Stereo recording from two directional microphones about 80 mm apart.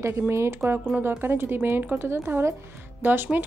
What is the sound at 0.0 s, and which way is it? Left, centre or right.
A woman's voice, right.